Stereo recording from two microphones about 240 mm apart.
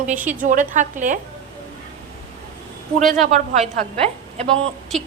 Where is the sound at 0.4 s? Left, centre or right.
Right.